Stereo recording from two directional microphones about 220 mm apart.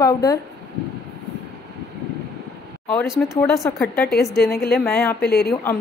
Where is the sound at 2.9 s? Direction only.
Centre (ahead or behind).